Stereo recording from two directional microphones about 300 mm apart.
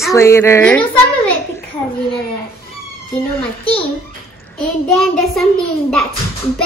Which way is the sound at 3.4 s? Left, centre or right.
Centre.